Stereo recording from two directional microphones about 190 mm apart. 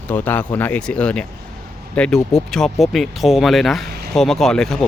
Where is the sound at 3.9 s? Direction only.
55° right (ahead or behind).